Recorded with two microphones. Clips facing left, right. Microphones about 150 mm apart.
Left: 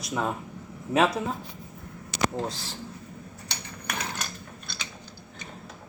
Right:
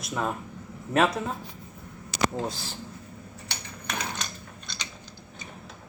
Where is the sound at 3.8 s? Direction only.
10° left (ahead or behind).